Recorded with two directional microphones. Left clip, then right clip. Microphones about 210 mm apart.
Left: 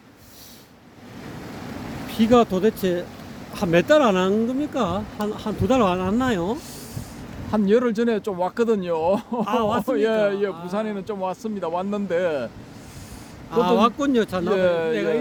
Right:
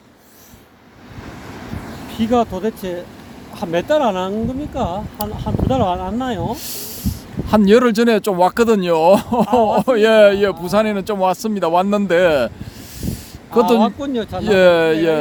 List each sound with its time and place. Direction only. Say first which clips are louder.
2.1 s speech: even; 20° left (ahead or behind)
6.6 s a man's voice: right 7 dB; 45° right (ahead or behind)
9.5 s speech: right 7 dB; 25° left (ahead or behind)
9.7 s a man's voice: right 9 dB; 45° right (ahead or behind)
13.7 s speech: right 1 dB; 30° left (ahead or behind)
14.4 s a man's voice: right 13 dB; 45° right (ahead or behind)